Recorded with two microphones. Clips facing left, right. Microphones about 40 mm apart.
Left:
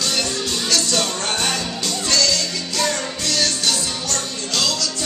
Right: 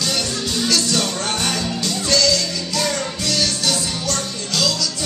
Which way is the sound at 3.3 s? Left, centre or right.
Centre.